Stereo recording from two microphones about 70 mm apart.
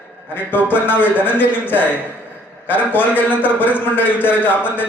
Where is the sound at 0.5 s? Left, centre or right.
Left.